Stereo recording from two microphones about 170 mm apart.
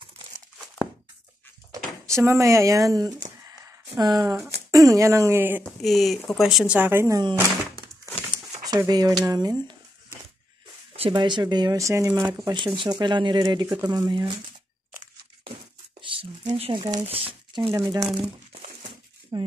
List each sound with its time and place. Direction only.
2.1 s speech: 15° right (ahead or behind)
5.6 s speech: centre (ahead or behind); by 7.4 s 20° right (ahead or behind)
7.4 s thunk: 20° left (ahead or behind)
8.6 s speech: 20° right (ahead or behind)
10.9 s speech: 35° right (ahead or behind)
16.0 s a sound: 30° right (ahead or behind)
17.6 s speech: 20° right (ahead or behind)
19.3 s speech: 25° right (ahead or behind)